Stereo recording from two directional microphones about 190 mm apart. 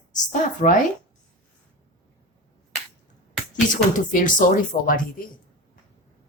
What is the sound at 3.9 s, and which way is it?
Speech, 45° left (ahead or behind).